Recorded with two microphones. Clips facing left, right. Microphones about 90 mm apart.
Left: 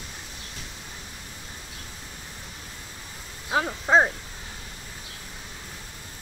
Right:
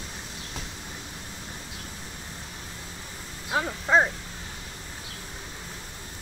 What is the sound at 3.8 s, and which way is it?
Speech, 25° left (ahead or behind).